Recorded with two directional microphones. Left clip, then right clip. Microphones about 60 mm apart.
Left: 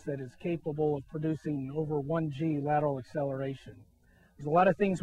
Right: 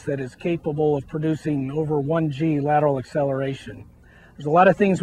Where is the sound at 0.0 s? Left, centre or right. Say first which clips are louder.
Right 10 dB; centre.